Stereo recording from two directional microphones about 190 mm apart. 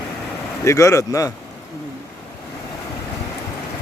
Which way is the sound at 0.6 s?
15° left (ahead or behind).